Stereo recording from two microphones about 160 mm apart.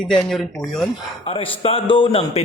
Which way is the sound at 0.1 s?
5° left (ahead or behind).